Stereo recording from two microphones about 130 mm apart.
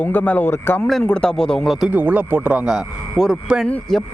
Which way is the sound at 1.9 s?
10° right (ahead or behind).